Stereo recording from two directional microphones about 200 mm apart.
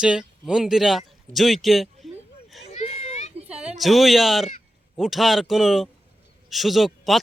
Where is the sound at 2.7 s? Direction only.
30° left (ahead or behind).